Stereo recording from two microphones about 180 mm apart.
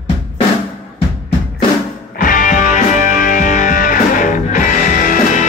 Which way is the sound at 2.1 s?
50° left (ahead or behind).